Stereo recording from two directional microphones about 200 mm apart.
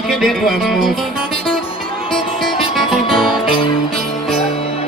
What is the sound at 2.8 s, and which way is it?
Music, centre (ahead or behind).